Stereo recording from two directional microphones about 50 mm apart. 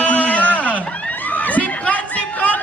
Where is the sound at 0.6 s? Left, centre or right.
Left.